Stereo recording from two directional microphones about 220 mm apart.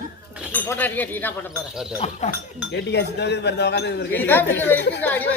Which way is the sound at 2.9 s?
50° left (ahead or behind).